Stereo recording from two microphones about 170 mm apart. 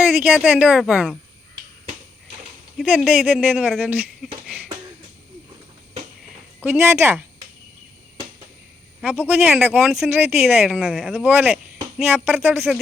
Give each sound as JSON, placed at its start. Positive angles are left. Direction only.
{"t": 0.0, "sound": "speech", "side_deg": -10}
{"t": 2.7, "sound": "speech", "side_deg": -5}
{"t": 6.6, "sound": "speech", "side_deg": -15}
{"t": 9.0, "sound": "speech", "side_deg": -10}